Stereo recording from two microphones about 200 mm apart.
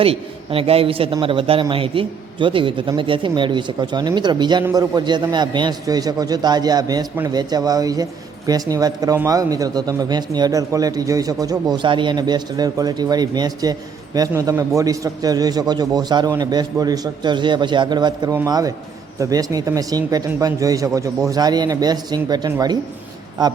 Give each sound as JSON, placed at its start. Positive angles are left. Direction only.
{"t": 0.0, "sound": "a man's voice", "side_deg": -30}